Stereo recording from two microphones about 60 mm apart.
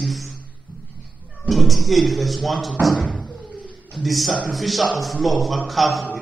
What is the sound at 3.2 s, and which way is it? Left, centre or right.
Knock, centre.